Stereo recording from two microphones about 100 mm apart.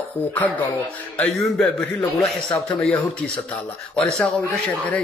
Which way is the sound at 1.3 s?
5° left (ahead or behind).